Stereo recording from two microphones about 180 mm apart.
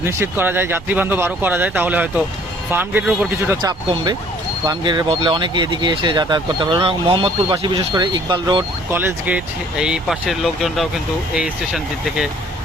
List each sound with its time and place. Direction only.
0.0 s speech: 15° right (ahead or behind)
8.9 s speech: 10° right (ahead or behind)